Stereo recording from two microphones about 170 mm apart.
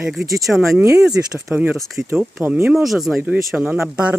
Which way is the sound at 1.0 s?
5° right (ahead or behind).